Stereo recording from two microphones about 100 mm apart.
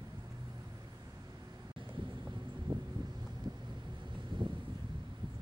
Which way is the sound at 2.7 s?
50° right (ahead or behind).